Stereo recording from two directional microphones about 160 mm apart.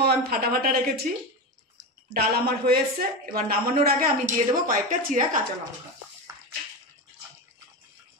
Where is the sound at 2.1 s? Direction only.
70° right (ahead or behind).